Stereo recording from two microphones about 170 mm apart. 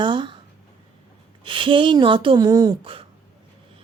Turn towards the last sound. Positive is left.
turn(degrees=-30)  # may be behind; listen again after turning